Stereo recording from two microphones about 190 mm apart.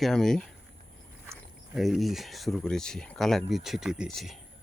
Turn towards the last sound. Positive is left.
turn(degrees=0)  # may be behind; listen again after turning